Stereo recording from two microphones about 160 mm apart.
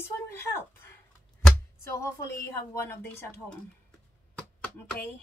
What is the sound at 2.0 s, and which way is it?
Speech, 20° left (ahead or behind).